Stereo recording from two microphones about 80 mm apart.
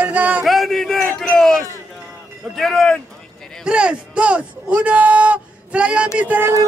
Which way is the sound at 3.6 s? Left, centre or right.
Centre.